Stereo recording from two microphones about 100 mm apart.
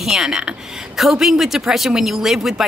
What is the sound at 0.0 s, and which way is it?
A woman's voice, 5° right (ahead or behind).